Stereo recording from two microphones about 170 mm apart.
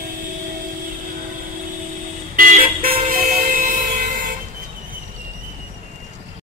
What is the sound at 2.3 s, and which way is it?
Vehicle, 55° right (ahead or behind).